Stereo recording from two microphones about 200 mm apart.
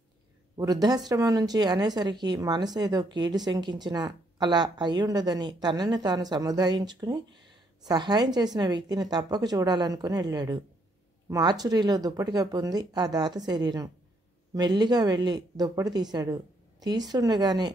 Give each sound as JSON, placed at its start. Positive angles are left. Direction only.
{"t": 0.6, "sound": "a woman's voice", "side_deg": -20}